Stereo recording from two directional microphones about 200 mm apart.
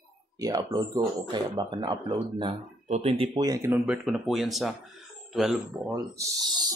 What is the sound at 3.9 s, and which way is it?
Speech, 5° right (ahead or behind).